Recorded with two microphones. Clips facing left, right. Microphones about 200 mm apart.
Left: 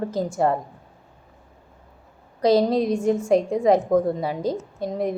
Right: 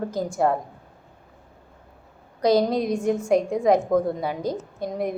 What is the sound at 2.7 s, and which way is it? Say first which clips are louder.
Speech: left 3 dB; 30° left (ahead or behind).